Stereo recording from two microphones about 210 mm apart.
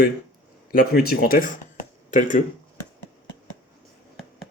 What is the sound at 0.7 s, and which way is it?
Speech, 45° left (ahead or behind).